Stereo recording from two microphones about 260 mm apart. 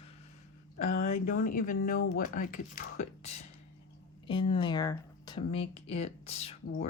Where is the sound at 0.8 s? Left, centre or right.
Left.